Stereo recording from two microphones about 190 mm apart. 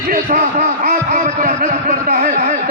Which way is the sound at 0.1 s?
40° right (ahead or behind).